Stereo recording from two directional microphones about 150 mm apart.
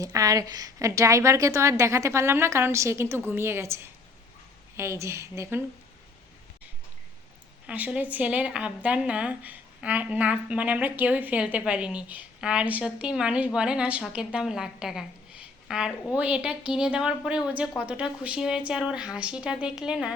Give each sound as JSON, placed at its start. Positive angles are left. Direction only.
{"t": 0.0, "sound": "a woman's voice", "side_deg": -20}
{"t": 7.7, "sound": "a woman's voice", "side_deg": -10}